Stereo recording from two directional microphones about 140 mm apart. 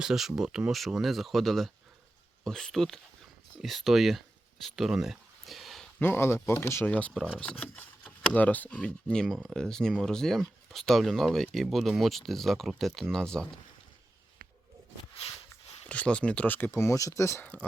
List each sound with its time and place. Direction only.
0.0 s speech: centre (ahead or behind)
4.6 s a sound: centre (ahead or behind)
6.0 s speech: 15° left (ahead or behind)
15.9 s speech: 10° left (ahead or behind)